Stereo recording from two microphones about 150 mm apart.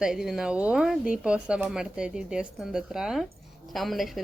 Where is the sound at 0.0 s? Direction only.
5° right (ahead or behind).